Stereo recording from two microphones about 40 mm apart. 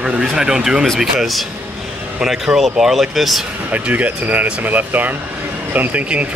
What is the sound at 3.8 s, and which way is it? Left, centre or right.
Speech, right.